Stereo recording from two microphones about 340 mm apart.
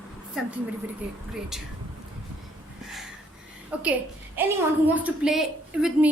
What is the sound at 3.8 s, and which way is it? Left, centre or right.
A woman's voice, centre.